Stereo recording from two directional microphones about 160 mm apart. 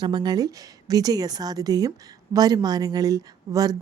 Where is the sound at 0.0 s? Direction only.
25° right (ahead or behind).